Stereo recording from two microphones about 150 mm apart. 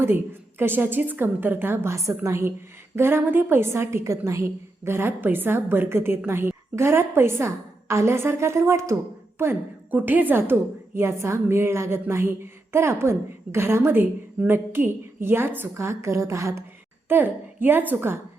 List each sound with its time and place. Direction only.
0.6 s a woman's voice: 15° right (ahead or behind)